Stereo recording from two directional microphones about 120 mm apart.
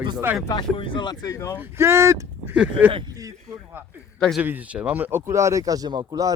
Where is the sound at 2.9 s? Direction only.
45° right (ahead or behind).